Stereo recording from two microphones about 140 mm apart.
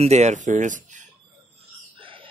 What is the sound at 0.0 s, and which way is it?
Speech, 55° right (ahead or behind).